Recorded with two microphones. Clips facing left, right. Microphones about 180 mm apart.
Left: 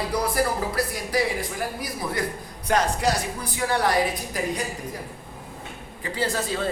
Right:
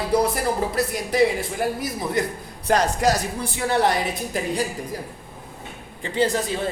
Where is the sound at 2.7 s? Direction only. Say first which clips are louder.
Right 3 dB; 40° right (ahead or behind).